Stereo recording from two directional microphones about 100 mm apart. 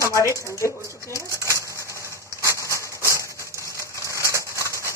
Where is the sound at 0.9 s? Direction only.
30° left (ahead or behind).